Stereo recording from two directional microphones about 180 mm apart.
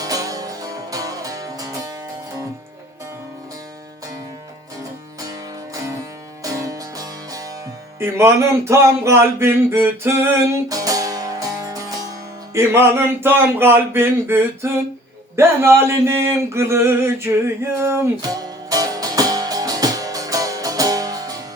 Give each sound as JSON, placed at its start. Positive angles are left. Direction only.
{"t": 0.0, "sound": "music", "side_deg": -20}
{"t": 6.4, "sound": "music", "side_deg": -20}
{"t": 7.9, "sound": "speech", "side_deg": -15}
{"t": 10.5, "sound": "music", "side_deg": -20}
{"t": 12.5, "sound": "speech", "side_deg": -15}
{"t": 15.4, "sound": "male singing", "side_deg": -15}